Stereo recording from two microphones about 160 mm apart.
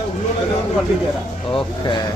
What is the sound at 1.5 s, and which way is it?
Speech, 30° left (ahead or behind).